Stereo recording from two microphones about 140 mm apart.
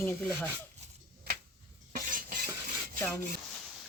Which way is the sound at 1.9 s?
85° right.